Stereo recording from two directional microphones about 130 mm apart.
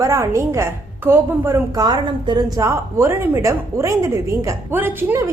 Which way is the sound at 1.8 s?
30° right (ahead or behind).